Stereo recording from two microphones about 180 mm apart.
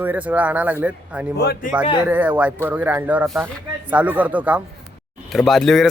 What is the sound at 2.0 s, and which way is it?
Speech, 10° right (ahead or behind).